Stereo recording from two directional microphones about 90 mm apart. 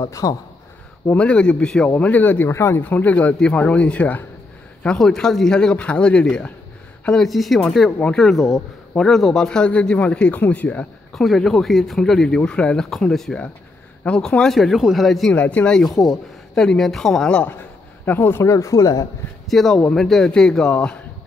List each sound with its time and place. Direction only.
0.0 s speech: 40° left (ahead or behind)
1.1 s speech: 15° left (ahead or behind)
11.1 s speech: 5° left (ahead or behind)
15.3 s speech: 15° left (ahead or behind)
18.0 s speech: 25° left (ahead or behind); by 19.0 s 40° left (ahead or behind)
19.4 s speech: centre (ahead or behind)